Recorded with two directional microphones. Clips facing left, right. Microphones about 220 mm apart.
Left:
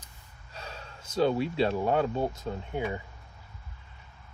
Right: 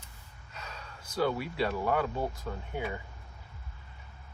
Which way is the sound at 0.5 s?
30° left (ahead or behind).